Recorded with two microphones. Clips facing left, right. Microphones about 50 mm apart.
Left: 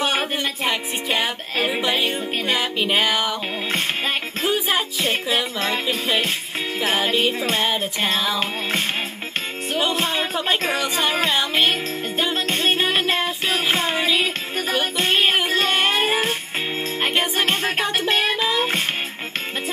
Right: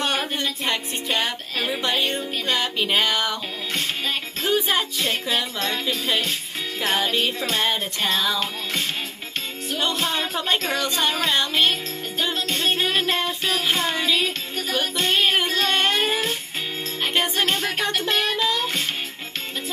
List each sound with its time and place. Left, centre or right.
0.4 s music: centre
4.5 s music: centre
6.8 s music: centre
7.6 s music: centre
9.9 s music: left
11.3 s music: centre
12.4 s music: left
17.1 s music: centre
17.5 s music: left
17.8 s music: left